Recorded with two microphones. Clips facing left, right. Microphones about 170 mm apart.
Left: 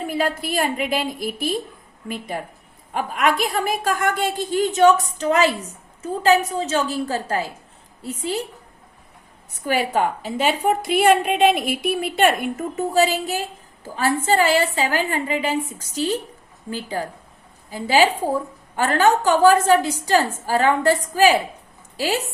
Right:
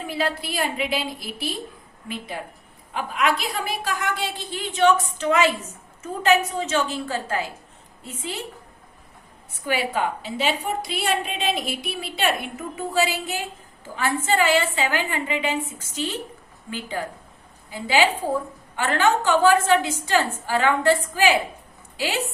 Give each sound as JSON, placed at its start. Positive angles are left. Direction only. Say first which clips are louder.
{"t": 0.1, "sound": "a woman's voice", "louder": "left 2 dB", "side_deg": 45}
{"t": 9.6, "sound": "a woman's voice", "louder": "left 4 dB", "side_deg": 45}